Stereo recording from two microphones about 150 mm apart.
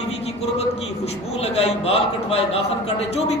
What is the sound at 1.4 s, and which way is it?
A woman's voice, 45° left (ahead or behind).